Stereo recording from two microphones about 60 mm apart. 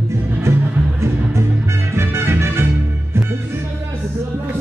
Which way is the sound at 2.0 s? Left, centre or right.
Right.